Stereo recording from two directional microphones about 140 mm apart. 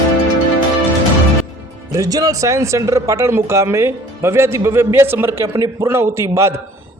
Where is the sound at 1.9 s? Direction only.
25° right (ahead or behind).